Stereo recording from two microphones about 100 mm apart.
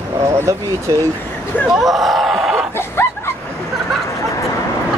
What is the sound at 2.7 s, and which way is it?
Dog, 25° left (ahead or behind).